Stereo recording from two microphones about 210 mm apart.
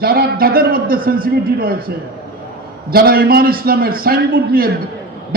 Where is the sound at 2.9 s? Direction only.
45° right (ahead or behind).